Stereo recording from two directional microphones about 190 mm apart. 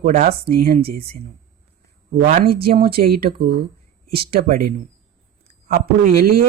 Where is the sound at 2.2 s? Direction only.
45° right (ahead or behind).